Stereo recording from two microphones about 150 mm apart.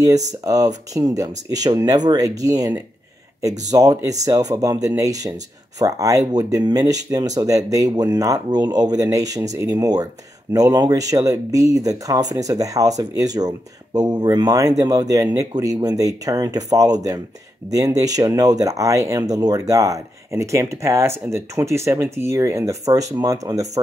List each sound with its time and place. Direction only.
0.4 s speech: 25° right (ahead or behind)